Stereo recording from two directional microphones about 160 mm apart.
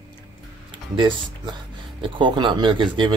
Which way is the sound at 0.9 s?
30° right (ahead or behind).